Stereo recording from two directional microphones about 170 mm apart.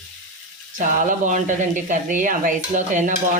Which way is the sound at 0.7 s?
50° right (ahead or behind).